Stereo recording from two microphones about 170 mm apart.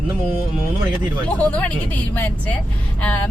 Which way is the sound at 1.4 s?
10° left (ahead or behind).